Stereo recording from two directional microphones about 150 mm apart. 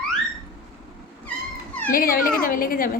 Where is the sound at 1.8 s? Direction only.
70° left (ahead or behind).